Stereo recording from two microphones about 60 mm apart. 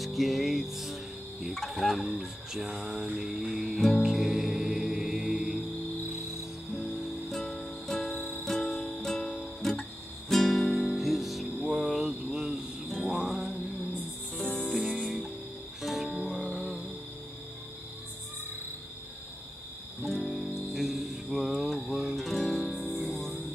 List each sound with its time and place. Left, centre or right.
0.0 s music: centre
1.5 s a sound: centre
3.2 s music: centre
6.8 s music: centre
8.2 s music: left
8.5 s music: centre
11.6 s a sound: centre
12.1 s a sound: centre
12.8 s music: centre
14.7 s music: centre
20.0 s music: centre
20.7 s music: centre